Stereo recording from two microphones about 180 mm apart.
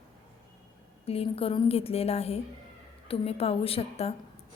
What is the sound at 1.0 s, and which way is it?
A woman's voice, 35° left (ahead or behind).